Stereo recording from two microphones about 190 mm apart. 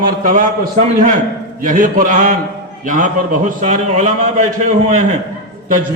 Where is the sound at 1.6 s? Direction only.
45° right (ahead or behind).